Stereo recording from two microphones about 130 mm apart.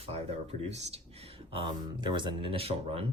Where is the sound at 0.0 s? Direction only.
55° right (ahead or behind).